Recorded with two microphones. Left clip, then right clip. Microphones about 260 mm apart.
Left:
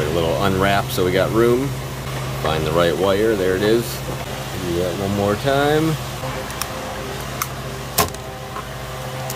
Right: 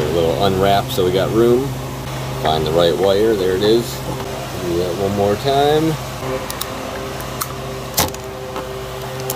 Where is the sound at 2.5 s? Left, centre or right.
Left.